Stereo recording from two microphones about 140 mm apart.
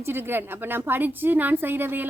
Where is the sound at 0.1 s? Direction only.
15° right (ahead or behind).